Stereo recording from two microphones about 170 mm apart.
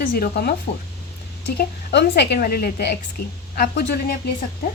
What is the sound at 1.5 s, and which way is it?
A woman's voice, 80° left.